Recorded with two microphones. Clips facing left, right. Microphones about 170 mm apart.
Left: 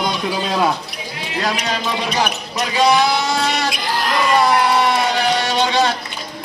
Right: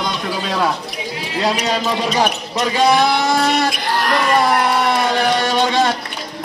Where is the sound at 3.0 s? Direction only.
55° right (ahead or behind).